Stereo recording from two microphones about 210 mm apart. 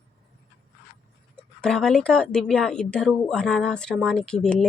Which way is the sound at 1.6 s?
5° left (ahead or behind).